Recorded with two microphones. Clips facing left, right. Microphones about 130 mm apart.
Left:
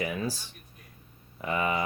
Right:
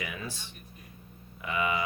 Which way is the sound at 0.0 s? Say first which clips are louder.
Left 7 dB; 35° left (ahead or behind).